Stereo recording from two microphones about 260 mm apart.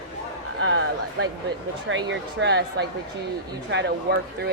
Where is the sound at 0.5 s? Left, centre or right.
Right.